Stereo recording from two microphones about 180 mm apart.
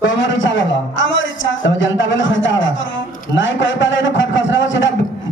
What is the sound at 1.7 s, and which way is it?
A man's voice, 90° left.